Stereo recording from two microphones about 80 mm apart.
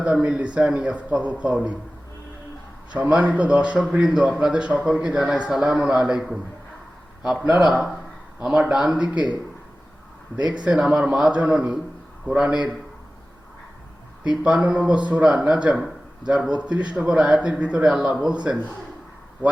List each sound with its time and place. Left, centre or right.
0.0 s a man's voice: centre
3.0 s a man's voice: centre
7.6 s a man's voice: centre
10.3 s a man's voice: centre
14.3 s a man's voice: centre